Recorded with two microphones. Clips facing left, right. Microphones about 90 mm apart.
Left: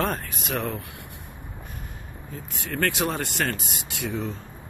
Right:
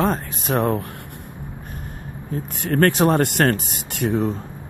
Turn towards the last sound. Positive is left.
turn(degrees=-55)  # may be behind; listen again after turning